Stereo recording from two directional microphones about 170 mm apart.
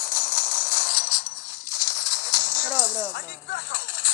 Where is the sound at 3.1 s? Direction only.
55° left (ahead or behind).